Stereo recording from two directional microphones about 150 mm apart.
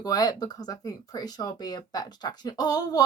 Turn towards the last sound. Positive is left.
turn(degrees=25)  # may be behind; listen again after turning